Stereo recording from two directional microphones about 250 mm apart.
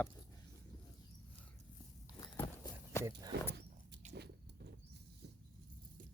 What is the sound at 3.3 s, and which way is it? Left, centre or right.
Speech, right.